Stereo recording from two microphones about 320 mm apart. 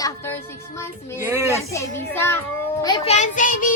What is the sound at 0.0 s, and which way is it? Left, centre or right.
Speech, centre.